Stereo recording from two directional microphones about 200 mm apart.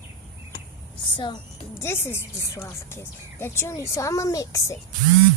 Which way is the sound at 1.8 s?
10° left (ahead or behind).